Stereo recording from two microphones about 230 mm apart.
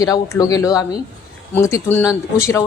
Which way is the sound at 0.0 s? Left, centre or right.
Centre.